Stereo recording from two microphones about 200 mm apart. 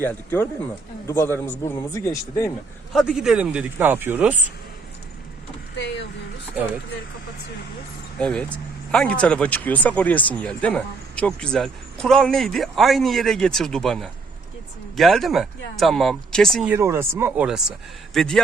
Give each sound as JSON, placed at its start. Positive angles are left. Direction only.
{"t": 0.0, "sound": "a man's voice", "side_deg": 10}
{"t": 2.9, "sound": "speech", "side_deg": 0}
{"t": 5.7, "sound": "speech", "side_deg": 60}
{"t": 8.2, "sound": "speech", "side_deg": 5}
{"t": 16.7, "sound": "speech", "side_deg": -10}